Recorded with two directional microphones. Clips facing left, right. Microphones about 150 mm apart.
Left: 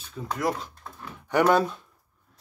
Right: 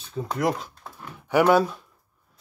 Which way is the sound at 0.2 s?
25° right (ahead or behind).